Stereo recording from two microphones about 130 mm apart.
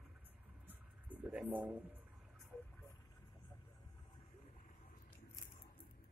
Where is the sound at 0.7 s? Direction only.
10° right (ahead or behind).